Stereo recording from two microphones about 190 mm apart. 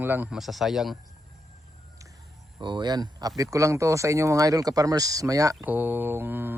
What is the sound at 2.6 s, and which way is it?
Speech, 25° right (ahead or behind).